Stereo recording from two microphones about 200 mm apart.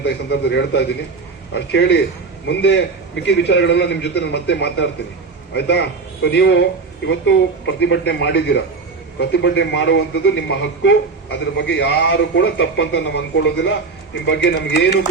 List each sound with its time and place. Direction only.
0.0 s speech: 60° left (ahead or behind)